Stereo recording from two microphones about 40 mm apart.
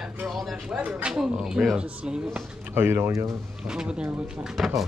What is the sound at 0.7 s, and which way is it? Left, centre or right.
Speech, right.